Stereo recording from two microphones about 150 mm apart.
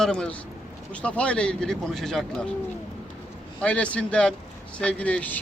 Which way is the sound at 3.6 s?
10° left (ahead or behind).